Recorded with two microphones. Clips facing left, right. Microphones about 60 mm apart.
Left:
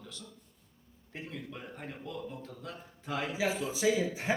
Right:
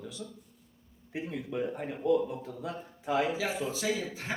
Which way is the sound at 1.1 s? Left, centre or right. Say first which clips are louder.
Right 7 dB; centre.